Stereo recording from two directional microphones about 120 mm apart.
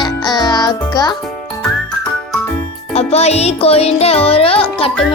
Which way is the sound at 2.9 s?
60° left (ahead or behind).